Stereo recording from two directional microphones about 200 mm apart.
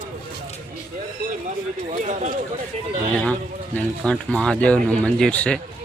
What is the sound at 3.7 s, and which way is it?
Speech, 5° left (ahead or behind).